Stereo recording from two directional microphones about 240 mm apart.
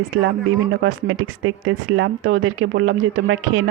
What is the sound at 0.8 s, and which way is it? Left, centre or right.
Speech, right.